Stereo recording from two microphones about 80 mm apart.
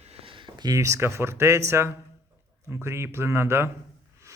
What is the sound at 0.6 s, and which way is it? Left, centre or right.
Speech, right.